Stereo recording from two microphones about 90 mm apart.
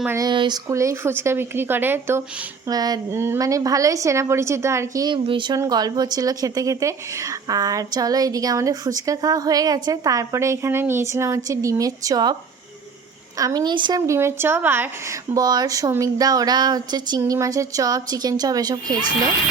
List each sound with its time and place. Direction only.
0.3 s speech: 55° right (ahead or behind)
0.7 s speech: 35° right (ahead or behind)
2.6 s speech: 45° right (ahead or behind)
3.1 s speech: 30° right (ahead or behind)
5.0 s speech: 70° right (ahead or behind)
5.5 s speech: 45° right (ahead or behind)
14.1 s speech: 30° right (ahead or behind)
15.1 s speech: 40° right (ahead or behind)